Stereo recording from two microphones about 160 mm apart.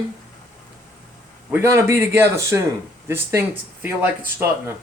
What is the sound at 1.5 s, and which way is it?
Speech, 15° right (ahead or behind).